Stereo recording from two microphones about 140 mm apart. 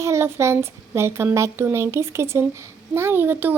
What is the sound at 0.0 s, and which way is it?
A woman's voice, 20° right (ahead or behind).